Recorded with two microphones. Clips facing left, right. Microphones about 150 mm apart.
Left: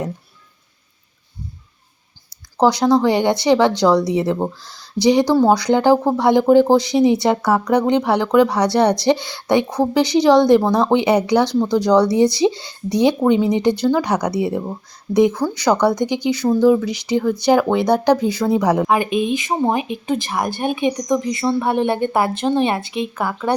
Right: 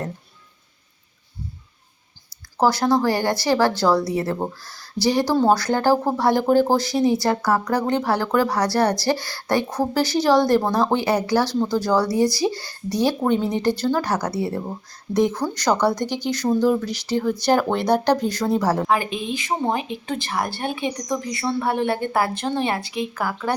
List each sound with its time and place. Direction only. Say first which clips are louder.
2.6 s speech: left 4 dB; 15° left (ahead or behind)